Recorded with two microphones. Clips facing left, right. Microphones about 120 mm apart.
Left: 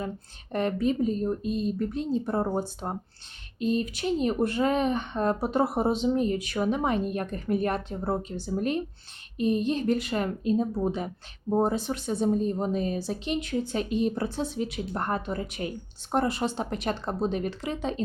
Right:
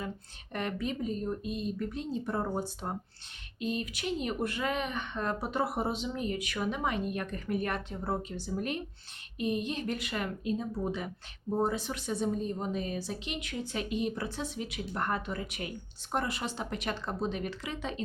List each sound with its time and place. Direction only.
0.5 s speech: 35° left (ahead or behind)